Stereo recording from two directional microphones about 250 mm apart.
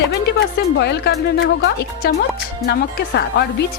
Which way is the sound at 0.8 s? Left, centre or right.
Left.